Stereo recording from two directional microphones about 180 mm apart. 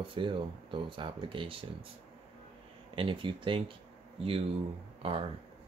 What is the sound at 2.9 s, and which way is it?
Speech, 30° right (ahead or behind).